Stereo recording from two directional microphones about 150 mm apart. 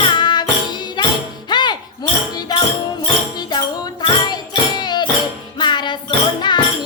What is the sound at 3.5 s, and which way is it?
Music, 30° left (ahead or behind).